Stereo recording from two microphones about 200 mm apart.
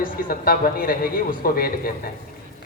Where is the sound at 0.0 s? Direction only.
45° left (ahead or behind).